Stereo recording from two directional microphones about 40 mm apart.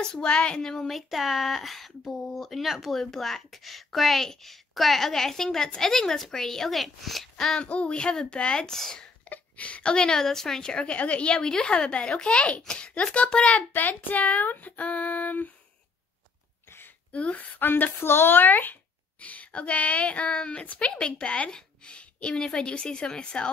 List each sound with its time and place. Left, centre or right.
0.0 s speech: left
0.6 s speech: centre
0.8 s speech: centre
7.5 s speech: left
8.7 s speech: centre
9.3 s speech: left
13.6 s child singing: left
17.1 s speech: left
17.6 s a sound: left
18.0 s a child's voice: left